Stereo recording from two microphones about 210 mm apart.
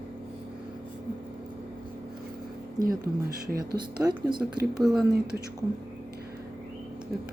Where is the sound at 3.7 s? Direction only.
20° right (ahead or behind).